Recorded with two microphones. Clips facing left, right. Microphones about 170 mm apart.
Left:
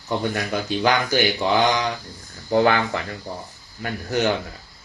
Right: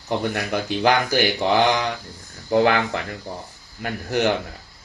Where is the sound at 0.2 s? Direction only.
60° right (ahead or behind).